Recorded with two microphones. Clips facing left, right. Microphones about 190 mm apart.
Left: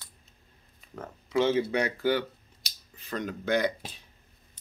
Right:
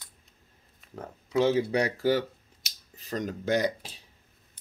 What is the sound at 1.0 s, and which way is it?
Speech, 35° right (ahead or behind).